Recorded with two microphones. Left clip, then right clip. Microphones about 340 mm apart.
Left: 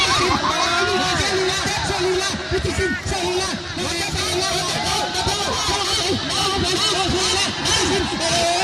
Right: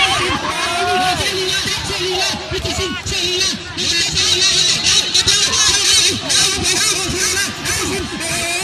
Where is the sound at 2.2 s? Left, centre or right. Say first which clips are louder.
Right 3 dB; centre.